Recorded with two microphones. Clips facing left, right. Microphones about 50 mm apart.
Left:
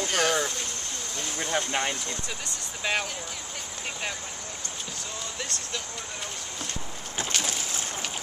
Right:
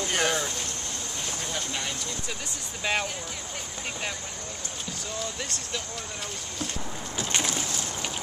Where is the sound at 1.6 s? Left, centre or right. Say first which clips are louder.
Left 7 dB; left.